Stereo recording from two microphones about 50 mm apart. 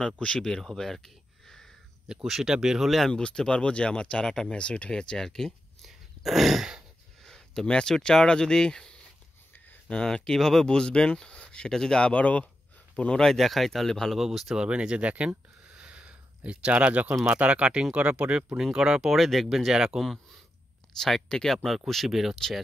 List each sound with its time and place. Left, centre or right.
0.2 s speech: centre
0.6 s a sound: centre
2.2 s speech: centre
3.1 s speech: centre
5.9 s a sound: centre
7.2 s a sound: centre
7.6 s speech: centre
9.5 s a sound: left
9.9 s speech: centre
13.2 s speech: centre
14.1 s speech: centre
14.6 s speech: centre
18.6 s speech: centre
21.0 s speech: centre